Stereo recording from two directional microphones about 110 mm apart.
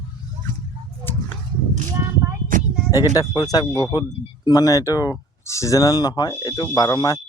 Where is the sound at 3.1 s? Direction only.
35° left (ahead or behind).